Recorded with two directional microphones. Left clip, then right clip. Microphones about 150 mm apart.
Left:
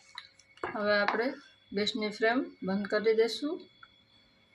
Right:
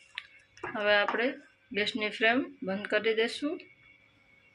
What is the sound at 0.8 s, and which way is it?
Speech, 15° right (ahead or behind).